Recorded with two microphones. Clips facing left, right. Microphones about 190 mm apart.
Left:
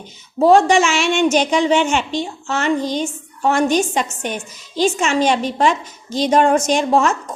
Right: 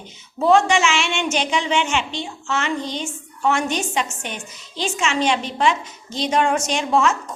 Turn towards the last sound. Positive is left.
turn(degrees=40)  # may be behind; listen again after turning